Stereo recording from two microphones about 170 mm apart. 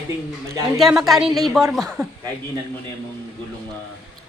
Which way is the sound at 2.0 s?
20° right (ahead or behind).